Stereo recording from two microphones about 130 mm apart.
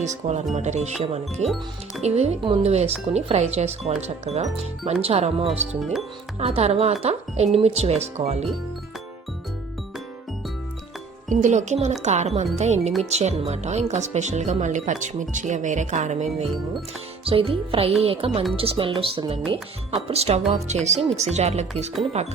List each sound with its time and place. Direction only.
0.0 s speech: 65° right (ahead or behind)
5.0 s music: 55° right (ahead or behind)
5.5 s speech: centre (ahead or behind)
6.4 s speech: 55° right (ahead or behind)
11.3 s speech: 70° right (ahead or behind)
17.2 s music: 45° right (ahead or behind)
21.0 s speech: centre (ahead or behind)
21.3 s speech: 60° right (ahead or behind)